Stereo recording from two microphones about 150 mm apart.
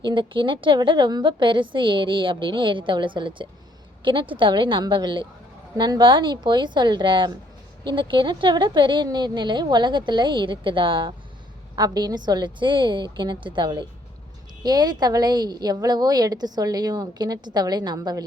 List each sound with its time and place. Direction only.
0.0 s a woman's voice: 30° right (ahead or behind)